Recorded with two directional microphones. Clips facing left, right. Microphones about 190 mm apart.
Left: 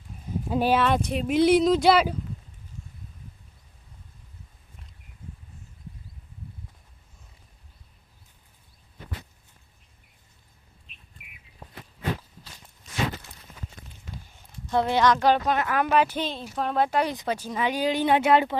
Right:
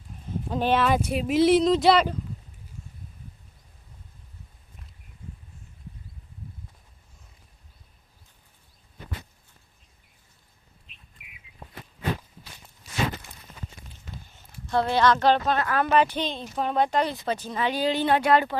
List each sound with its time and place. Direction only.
0.1 s speech: 5° left (ahead or behind)
11.5 s a sound: 35° left (ahead or behind)
14.3 s speech: 15° left (ahead or behind)